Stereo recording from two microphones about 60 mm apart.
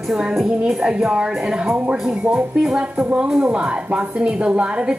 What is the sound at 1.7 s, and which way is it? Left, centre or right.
A woman's voice, right.